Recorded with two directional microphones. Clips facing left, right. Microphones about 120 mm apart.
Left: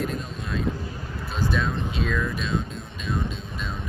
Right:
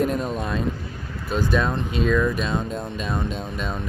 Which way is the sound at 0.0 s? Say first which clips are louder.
Right 7 dB; 55° right (ahead or behind).